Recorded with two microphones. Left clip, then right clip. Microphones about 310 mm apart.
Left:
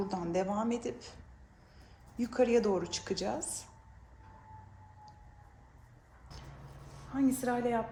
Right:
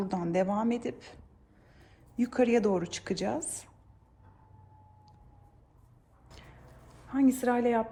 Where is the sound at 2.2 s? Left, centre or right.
Right.